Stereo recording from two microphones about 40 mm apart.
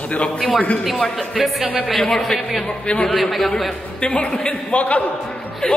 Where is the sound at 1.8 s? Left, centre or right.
Centre.